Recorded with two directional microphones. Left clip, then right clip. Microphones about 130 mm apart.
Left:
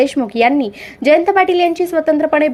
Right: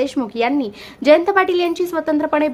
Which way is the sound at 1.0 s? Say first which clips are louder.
Left 2 dB; 15° left (ahead or behind).